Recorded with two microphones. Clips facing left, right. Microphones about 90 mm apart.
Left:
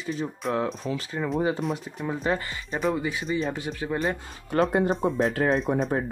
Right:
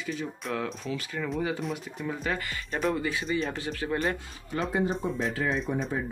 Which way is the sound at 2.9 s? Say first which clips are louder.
Left 1 dB; 15° left (ahead or behind).